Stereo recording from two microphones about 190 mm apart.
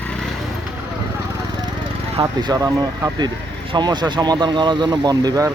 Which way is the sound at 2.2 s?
20° right (ahead or behind).